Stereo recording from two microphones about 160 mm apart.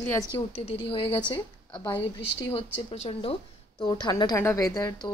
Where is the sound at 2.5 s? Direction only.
35° left (ahead or behind); by 4.9 s 20° left (ahead or behind).